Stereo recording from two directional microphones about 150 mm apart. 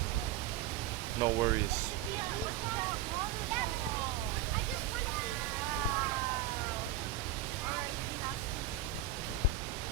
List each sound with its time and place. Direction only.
1.2 s speech: 20° right (ahead or behind)